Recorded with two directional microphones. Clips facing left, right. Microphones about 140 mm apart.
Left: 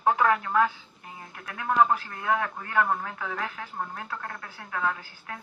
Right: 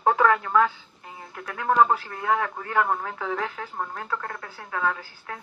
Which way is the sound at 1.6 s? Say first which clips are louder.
Right 3 dB; 40° right (ahead or behind).